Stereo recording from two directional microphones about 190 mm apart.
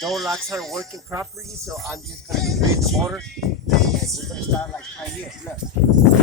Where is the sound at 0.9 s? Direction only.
15° right (ahead or behind).